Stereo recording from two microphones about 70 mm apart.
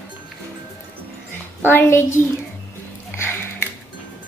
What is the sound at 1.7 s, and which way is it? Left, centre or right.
Speech, left.